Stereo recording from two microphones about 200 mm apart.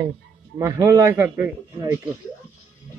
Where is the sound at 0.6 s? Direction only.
15° right (ahead or behind).